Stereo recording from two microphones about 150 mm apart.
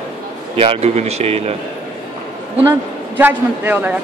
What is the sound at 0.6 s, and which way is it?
Speech, 40° right (ahead or behind).